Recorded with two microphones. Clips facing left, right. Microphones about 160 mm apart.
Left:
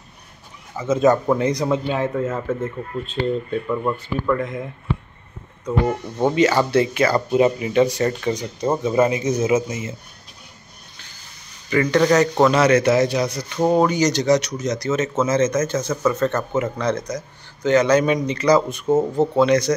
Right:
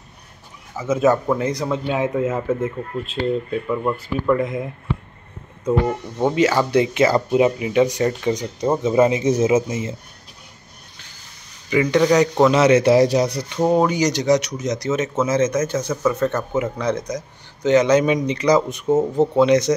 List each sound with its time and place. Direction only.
0.7 s speech: 10° right (ahead or behind)
6.1 s speech: 5° right (ahead or behind)
6.7 s speech: 20° right (ahead or behind)
7.2 s speech: 10° right (ahead or behind); by 9.9 s 30° right (ahead or behind)
11.7 s speech: 15° right (ahead or behind); by 13.5 s 35° right (ahead or behind)
13.6 s speech: 5° right (ahead or behind)